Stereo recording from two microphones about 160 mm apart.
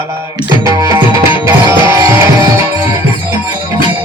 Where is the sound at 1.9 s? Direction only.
15° right (ahead or behind).